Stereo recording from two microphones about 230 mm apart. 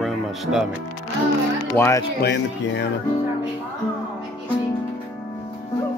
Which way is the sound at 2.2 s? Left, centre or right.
Left.